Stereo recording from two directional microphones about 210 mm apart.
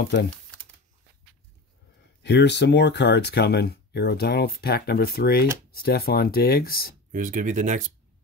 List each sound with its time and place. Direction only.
2.2 s speech: 55° left (ahead or behind)
7.1 s speech: 40° right (ahead or behind)